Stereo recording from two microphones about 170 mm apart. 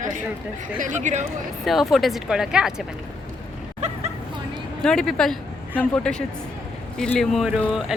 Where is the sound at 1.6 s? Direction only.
Centre (ahead or behind).